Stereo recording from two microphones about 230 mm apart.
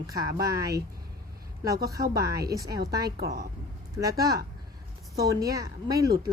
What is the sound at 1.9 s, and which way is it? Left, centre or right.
A woman's voice, centre.